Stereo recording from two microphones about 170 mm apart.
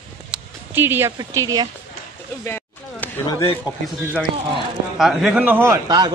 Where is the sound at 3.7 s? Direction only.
25° left (ahead or behind).